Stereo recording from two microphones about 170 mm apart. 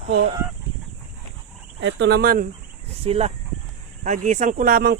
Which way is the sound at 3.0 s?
35° right (ahead or behind).